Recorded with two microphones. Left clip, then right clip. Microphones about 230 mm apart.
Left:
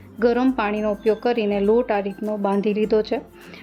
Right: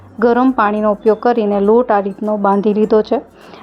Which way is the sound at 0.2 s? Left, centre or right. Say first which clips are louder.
Right 7 dB; centre.